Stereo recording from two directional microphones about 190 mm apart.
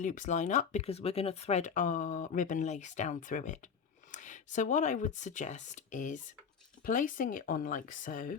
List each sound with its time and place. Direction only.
0.0 s speech: 40° left (ahead or behind)